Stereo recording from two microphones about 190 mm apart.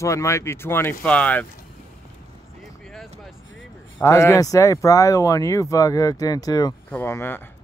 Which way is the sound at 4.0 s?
15° left (ahead or behind).